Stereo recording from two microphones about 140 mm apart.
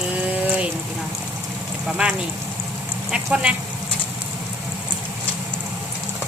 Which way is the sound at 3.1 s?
5° right (ahead or behind).